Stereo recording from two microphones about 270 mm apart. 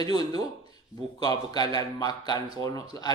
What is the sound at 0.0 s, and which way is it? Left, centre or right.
A man's voice, centre.